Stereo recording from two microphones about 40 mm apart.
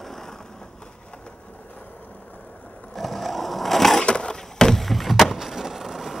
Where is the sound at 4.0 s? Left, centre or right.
Left.